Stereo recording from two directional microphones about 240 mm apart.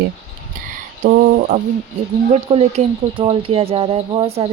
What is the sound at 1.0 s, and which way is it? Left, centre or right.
Speech, right.